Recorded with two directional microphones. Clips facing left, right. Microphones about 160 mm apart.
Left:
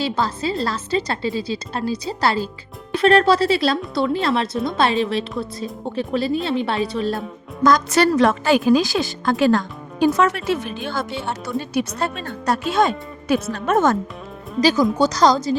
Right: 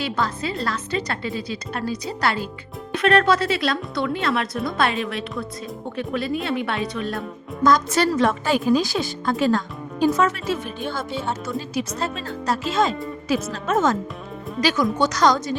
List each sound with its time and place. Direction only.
0.0 s a woman's voice: 30° left (ahead or behind)
7.6 s speech: 80° left
11.4 s speech: 65° left (ahead or behind)
14.6 s a woman's voice: 35° left (ahead or behind)